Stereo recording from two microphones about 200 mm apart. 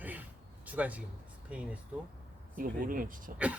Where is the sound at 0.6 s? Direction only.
5° right (ahead or behind).